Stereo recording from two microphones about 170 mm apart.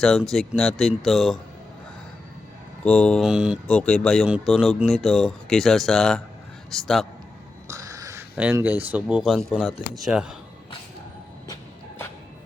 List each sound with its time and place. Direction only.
0.0 s speech: centre (ahead or behind)
2.8 s speech: 5° left (ahead or behind)
7.7 s a sound: 20° right (ahead or behind)
8.4 s speech: 10° right (ahead or behind)